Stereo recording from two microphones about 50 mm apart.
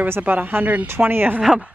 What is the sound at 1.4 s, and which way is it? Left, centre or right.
Speech, centre.